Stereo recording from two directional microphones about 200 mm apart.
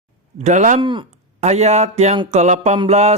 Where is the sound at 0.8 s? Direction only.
25° right (ahead or behind).